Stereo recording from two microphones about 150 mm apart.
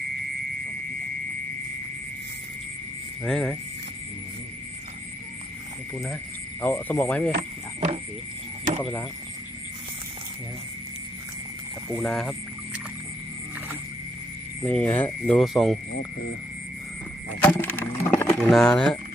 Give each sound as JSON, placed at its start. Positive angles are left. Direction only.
{"t": 3.2, "sound": "speech", "side_deg": 5}
{"t": 6.6, "sound": "speech", "side_deg": 10}
{"t": 7.3, "sound": "a sound", "side_deg": -60}
{"t": 11.9, "sound": "speech", "side_deg": 0}
{"t": 14.6, "sound": "speech", "side_deg": 10}
{"t": 17.4, "sound": "a sound", "side_deg": 10}
{"t": 18.3, "sound": "speech", "side_deg": 5}